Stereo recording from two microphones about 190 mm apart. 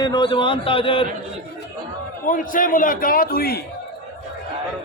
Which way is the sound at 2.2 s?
45° left (ahead or behind).